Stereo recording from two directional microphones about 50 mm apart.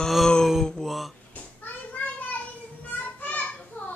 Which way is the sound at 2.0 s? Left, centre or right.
Left.